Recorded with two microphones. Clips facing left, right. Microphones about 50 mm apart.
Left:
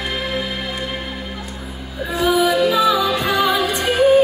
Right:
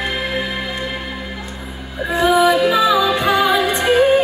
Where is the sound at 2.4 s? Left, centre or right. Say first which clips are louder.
Right 2 dB; right.